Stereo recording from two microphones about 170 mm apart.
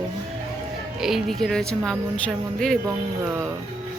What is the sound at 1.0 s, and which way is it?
Speech, centre (ahead or behind).